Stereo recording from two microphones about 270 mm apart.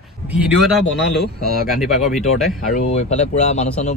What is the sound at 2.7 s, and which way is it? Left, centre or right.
Speech, left.